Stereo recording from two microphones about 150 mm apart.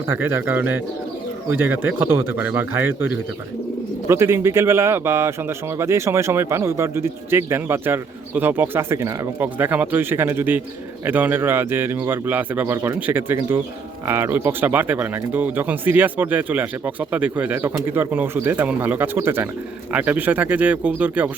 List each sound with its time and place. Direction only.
0.1 s speech: 15° right (ahead or behind)